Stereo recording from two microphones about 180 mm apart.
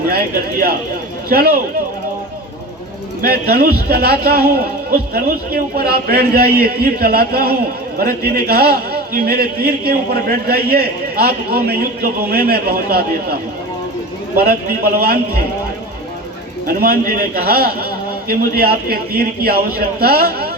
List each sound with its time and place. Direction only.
0.1 s a man's voice: 60° right (ahead or behind)
3.2 s a man's voice: 60° right (ahead or behind)
14.3 s a man's voice: 55° right (ahead or behind)
16.6 s a man's voice: 55° right (ahead or behind)